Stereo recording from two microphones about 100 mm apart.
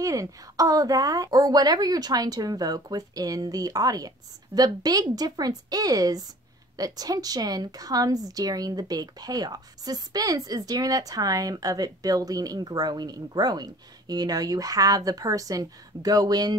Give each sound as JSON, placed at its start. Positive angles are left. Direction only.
{"t": 0.0, "sound": "a woman's voice", "side_deg": -35}